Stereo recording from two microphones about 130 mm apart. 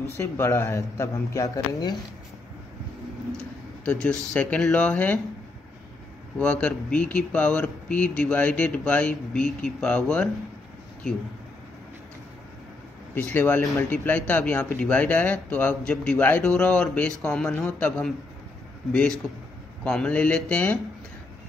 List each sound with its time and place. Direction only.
0.2 s speech: 20° left (ahead or behind)
3.8 s a man's voice: 10° left (ahead or behind)
6.3 s a man's voice: 10° left (ahead or behind)
13.1 s a man's voice: 15° left (ahead or behind)